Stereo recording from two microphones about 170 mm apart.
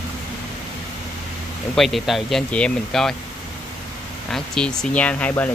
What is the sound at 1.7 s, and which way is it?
Speech, centre (ahead or behind).